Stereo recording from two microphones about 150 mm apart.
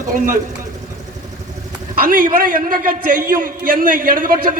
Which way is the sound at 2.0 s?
70° right (ahead or behind).